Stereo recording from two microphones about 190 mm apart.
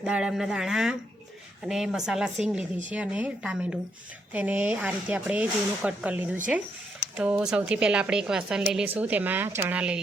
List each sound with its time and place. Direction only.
0.0 s speech: 5° right (ahead or behind)